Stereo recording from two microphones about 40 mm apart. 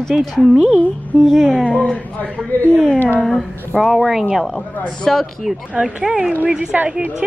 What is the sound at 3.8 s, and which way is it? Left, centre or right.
Speech, centre.